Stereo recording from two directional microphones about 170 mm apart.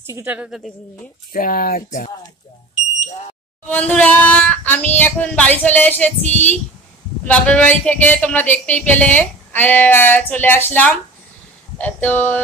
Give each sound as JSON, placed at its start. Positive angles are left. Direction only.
{"t": 0.0, "sound": "a woman's voice", "side_deg": -15}
{"t": 1.3, "sound": "speech", "side_deg": 55}
{"t": 3.6, "sound": "music", "side_deg": 10}